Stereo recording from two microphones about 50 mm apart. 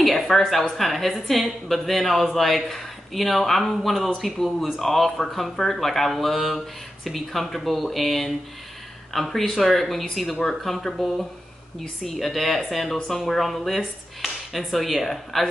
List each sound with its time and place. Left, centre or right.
0.0 s a woman's voice: centre
13.2 s a woman's voice: centre